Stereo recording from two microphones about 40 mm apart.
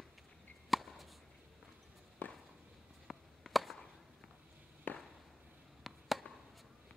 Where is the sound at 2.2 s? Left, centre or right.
Left.